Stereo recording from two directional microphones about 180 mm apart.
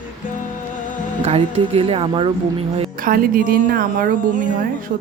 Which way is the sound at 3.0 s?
55° right (ahead or behind).